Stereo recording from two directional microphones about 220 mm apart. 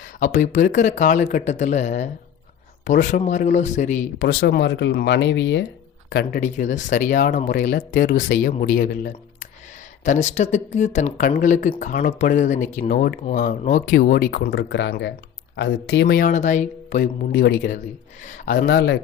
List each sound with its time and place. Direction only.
0.2 s speech: 35° left (ahead or behind)
4.3 s speech: 50° left (ahead or behind)
6.4 s speech: 35° left (ahead or behind)
17.3 s speech: 50° left (ahead or behind)